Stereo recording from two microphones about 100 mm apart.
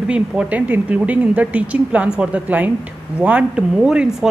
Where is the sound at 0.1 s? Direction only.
15° right (ahead or behind).